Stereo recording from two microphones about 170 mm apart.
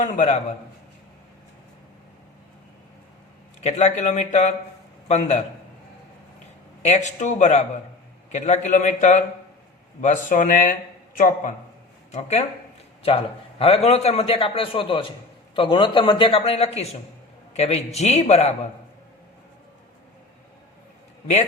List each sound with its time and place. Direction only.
0.0 s a man's voice: 40° left (ahead or behind)
3.6 s speech: 45° left (ahead or behind)
6.8 s speech: 45° left (ahead or behind)
12.1 s a man's voice: 40° left (ahead or behind)